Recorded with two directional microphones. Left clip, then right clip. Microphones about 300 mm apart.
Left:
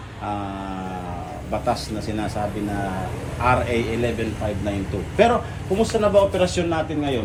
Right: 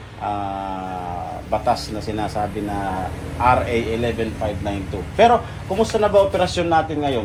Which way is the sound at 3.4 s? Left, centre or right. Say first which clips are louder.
Right 3 dB; centre.